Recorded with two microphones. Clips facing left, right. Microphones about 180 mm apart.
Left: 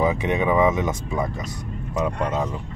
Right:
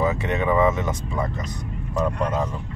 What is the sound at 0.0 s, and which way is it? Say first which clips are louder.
Speech: left 2 dB; 15° left (ahead or behind).